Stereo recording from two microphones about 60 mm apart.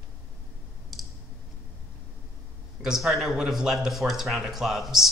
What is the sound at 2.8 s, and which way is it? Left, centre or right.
Speech, centre.